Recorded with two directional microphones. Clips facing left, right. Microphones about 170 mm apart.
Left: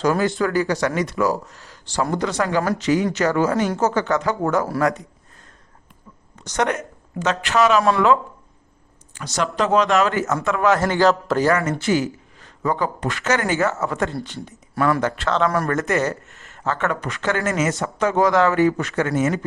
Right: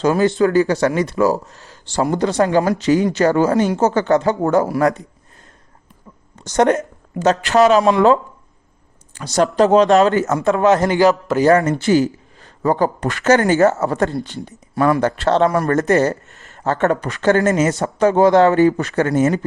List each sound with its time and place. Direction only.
0.0 s speech: 25° right (ahead or behind)
6.4 s a woman's voice: 30° right (ahead or behind)
7.8 s speech: 20° right (ahead or behind)
9.1 s speech: 35° right (ahead or behind)
10.7 s speech: 20° right (ahead or behind)
11.3 s speech: centre (ahead or behind)
11.8 s a man's voice: 35° right (ahead or behind)